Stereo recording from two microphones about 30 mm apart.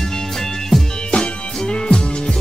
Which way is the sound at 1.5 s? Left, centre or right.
Left.